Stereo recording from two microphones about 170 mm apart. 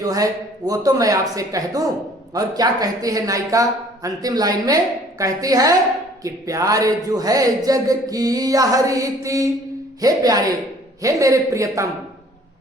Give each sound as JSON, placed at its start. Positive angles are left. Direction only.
{"t": 0.0, "sound": "speech", "side_deg": -20}